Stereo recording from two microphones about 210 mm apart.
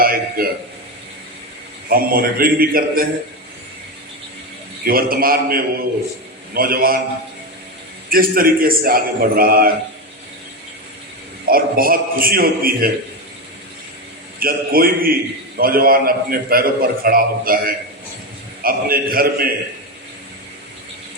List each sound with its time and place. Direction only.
0.0 s a sound: 45° right (ahead or behind)
1.9 s a man's voice: 45° right (ahead or behind)
4.9 s a man's voice: 45° right (ahead or behind)
8.1 s a man's voice: 45° right (ahead or behind)
11.4 s a man's voice: 45° right (ahead or behind)
14.3 s a man's voice: 45° right (ahead or behind)